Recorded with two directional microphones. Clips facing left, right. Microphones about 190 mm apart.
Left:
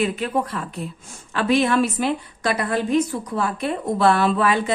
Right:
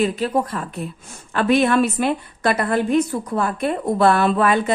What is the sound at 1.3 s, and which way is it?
A woman's voice, 55° right (ahead or behind).